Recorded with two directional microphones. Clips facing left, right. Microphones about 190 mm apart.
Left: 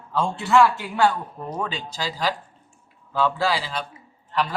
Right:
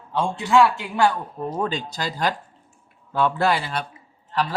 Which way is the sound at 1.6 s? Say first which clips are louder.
Right 3 dB; 45° right (ahead or behind).